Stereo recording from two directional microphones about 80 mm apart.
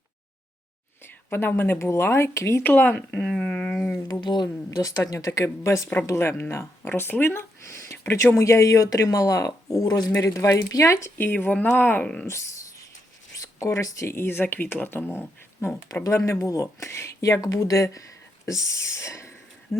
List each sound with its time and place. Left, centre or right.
1.3 s speech: left
2.6 s speech: left
3.2 s a sound: centre
4.1 s speech: left
4.8 s speech: left
11.2 s speech: left
13.4 s speech: left
16.0 s speech: left